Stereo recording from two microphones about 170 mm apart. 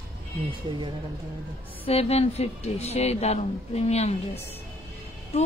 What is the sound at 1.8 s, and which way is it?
Speech, 35° left (ahead or behind).